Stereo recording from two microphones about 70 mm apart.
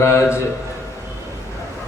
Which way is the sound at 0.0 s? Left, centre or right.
Left.